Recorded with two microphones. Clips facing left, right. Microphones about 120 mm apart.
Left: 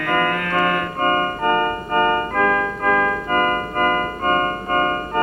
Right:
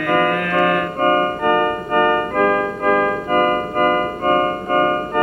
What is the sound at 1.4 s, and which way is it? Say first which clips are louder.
Keyboard: right 2 dB; 40° left (ahead or behind).